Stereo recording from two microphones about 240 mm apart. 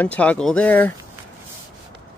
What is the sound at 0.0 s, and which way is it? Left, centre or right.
Speech, centre.